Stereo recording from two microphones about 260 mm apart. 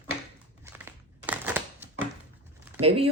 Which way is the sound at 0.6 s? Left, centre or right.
Centre.